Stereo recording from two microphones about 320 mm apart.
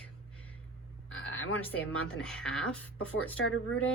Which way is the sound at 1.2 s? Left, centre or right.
Left.